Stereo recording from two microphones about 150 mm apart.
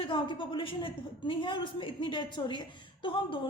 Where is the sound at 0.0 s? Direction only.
35° left (ahead or behind).